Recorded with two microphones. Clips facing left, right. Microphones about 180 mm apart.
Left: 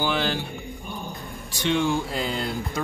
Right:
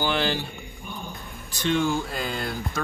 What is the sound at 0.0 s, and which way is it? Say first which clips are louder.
Speech: even; centre (ahead or behind).